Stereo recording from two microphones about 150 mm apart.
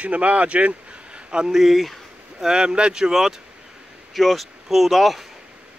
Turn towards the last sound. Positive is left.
turn(degrees=-5)  # may be behind; listen again after turning